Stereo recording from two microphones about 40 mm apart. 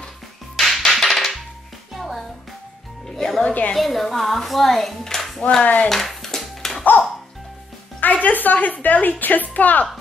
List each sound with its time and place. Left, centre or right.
0.6 s music: centre
3.1 s speech: centre
5.6 s speech: left
5.9 s music: centre
8.0 s a woman's voice: left